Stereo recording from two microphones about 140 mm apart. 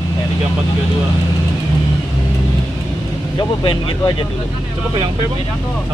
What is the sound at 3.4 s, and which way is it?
Speech, 35° left (ahead or behind).